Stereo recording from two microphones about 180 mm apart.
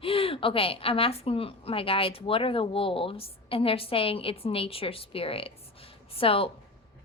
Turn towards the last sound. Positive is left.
turn(degrees=30)  # may be behind; listen again after turning